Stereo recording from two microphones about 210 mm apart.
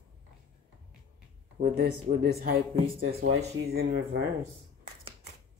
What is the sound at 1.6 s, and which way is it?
Speech, 45° right (ahead or behind).